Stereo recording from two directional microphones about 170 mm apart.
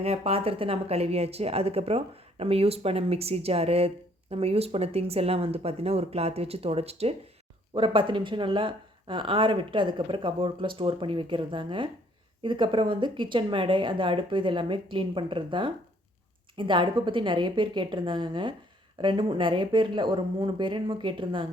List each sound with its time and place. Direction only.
0.0 s speech: 35° right (ahead or behind)